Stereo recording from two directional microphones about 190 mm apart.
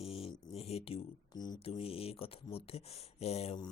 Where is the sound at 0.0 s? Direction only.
30° left (ahead or behind).